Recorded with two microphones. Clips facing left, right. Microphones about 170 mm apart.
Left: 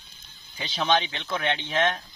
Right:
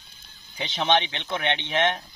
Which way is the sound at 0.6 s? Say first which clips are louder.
Right 1 dB; 20° right (ahead or behind).